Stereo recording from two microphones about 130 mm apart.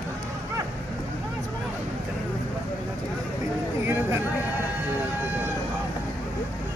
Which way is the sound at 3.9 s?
20° right (ahead or behind).